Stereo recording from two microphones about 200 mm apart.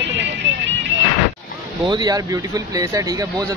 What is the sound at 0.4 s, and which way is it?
Vehicle, 65° right (ahead or behind).